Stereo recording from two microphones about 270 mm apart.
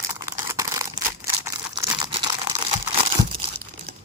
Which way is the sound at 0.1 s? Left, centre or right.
Centre.